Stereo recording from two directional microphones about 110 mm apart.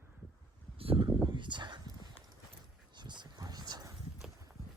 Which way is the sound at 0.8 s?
60° right (ahead or behind).